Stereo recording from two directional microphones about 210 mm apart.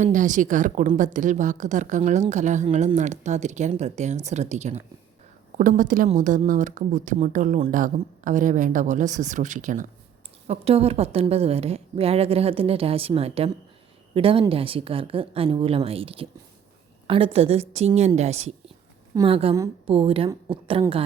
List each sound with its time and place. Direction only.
0.0 s a woman's voice: 35° right (ahead or behind)